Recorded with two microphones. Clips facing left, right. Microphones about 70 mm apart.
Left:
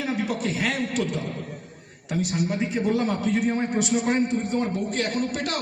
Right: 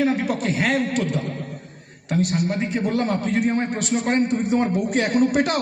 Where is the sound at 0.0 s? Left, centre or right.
Right.